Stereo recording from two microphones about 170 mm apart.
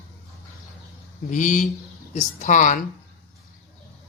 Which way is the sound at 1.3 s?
45° left (ahead or behind).